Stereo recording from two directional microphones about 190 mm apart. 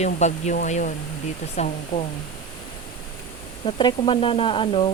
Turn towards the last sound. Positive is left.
turn(degrees=30)  # may be behind; listen again after turning